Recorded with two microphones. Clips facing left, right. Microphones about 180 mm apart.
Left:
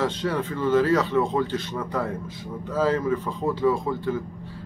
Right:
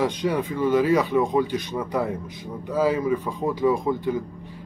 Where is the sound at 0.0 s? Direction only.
15° right (ahead or behind).